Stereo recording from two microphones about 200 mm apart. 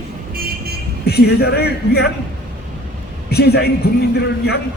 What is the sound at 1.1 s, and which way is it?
A man's voice, 55° left (ahead or behind).